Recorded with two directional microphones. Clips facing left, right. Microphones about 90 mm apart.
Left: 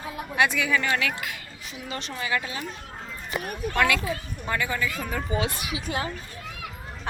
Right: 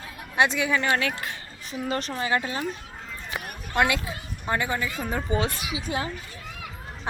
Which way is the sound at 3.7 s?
20° right (ahead or behind).